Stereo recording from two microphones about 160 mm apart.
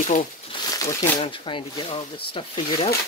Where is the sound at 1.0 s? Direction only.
35° left (ahead or behind).